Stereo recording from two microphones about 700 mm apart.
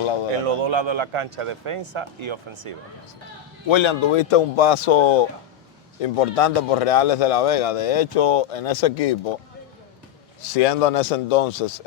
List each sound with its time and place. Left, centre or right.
0.0 s speech: left
0.4 s speech: right
3.7 s speech: left
10.5 s speech: left